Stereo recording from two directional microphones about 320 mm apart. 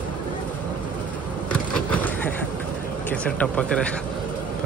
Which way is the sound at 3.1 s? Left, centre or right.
Centre.